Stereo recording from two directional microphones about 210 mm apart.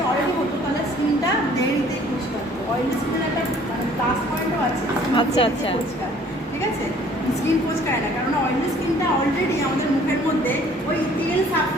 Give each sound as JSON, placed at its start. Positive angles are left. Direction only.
{"t": 5.1, "sound": "speech", "side_deg": 25}